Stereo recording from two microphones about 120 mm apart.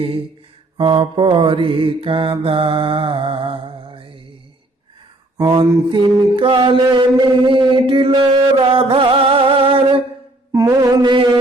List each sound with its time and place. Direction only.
0.8 s mantra: 45° right (ahead or behind)
5.4 s mantra: 40° right (ahead or behind)
10.5 s music: 30° right (ahead or behind)